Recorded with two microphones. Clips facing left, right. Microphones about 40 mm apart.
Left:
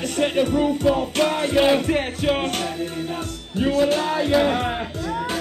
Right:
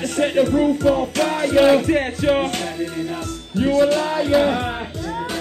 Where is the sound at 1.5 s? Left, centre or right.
Left.